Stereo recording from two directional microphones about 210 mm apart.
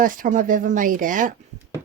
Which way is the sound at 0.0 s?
40° right (ahead or behind).